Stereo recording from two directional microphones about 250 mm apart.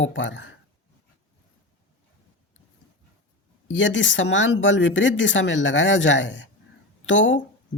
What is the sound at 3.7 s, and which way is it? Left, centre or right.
Speech, left.